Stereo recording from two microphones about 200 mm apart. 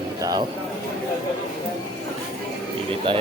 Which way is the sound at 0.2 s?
20° right (ahead or behind).